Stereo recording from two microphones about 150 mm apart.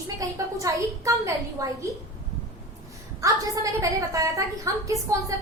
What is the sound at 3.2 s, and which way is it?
A woman's voice, 20° right (ahead or behind).